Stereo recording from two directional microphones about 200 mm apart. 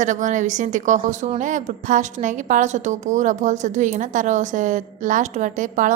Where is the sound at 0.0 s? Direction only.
40° right (ahead or behind).